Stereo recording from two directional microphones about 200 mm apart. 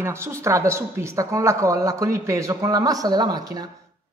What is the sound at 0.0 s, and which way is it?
Speech, 15° right (ahead or behind).